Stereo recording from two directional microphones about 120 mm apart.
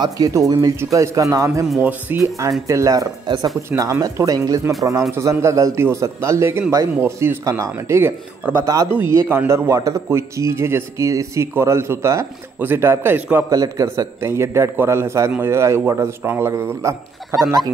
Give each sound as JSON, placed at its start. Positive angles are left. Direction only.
{"t": 0.0, "sound": "speech", "side_deg": -30}
{"t": 1.8, "sound": "speech", "side_deg": -15}
{"t": 2.7, "sound": "speech", "side_deg": -25}
{"t": 13.5, "sound": "speech", "side_deg": -30}